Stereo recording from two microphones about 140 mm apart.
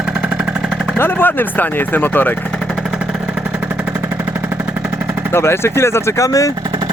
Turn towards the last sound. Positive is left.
turn(degrees=25)  # may be behind; listen again after turning